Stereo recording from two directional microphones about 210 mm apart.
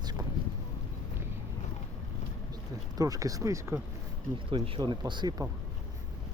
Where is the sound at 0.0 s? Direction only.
20° right (ahead or behind).